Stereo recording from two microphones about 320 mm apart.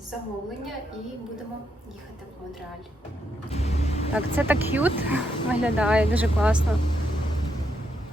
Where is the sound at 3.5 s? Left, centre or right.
Centre.